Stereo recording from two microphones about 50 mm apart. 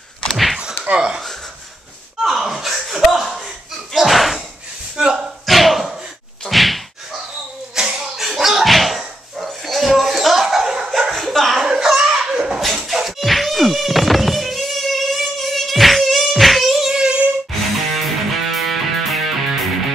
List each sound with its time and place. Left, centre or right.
0.3 s thunk: centre
0.9 s speech: centre
2.2 s chuckle: centre
3.9 s slam: centre
4.9 s a sound: centre
5.5 s dog: centre
6.5 s whack: centre
7.7 s a sound: centre
8.2 s slam: centre
11.0 s chuckle: centre
11.8 s a sound: centre
17.9 s music: centre